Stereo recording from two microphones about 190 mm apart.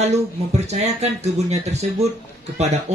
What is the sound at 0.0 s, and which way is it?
Speech, 35° right (ahead or behind).